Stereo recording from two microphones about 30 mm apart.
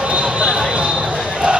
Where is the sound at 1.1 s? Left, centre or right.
Right.